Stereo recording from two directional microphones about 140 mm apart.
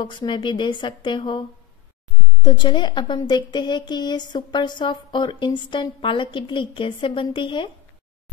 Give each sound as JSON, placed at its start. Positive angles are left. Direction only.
{"t": 0.0, "sound": "speech", "side_deg": 35}
{"t": 2.4, "sound": "speech", "side_deg": 35}